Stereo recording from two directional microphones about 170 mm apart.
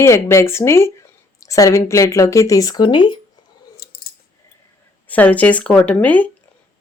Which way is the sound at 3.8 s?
65° left (ahead or behind).